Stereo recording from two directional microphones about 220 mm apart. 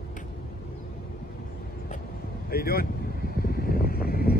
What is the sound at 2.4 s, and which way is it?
Vehicle, 45° left (ahead or behind).